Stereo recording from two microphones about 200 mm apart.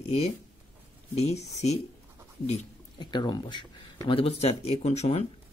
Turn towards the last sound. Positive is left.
turn(degrees=30)  # may be behind; listen again after turning